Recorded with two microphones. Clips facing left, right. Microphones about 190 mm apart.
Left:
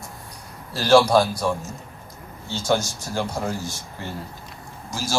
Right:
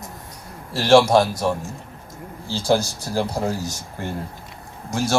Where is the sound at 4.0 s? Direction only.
50° right (ahead or behind).